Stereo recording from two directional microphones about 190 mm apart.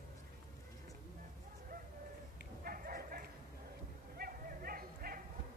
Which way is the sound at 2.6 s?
50° right (ahead or behind).